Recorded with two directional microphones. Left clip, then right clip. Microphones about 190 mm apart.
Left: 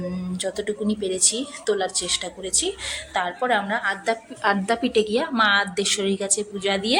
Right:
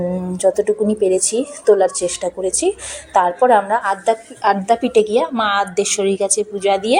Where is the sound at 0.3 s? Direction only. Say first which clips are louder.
Right 12 dB; 10° right (ahead or behind).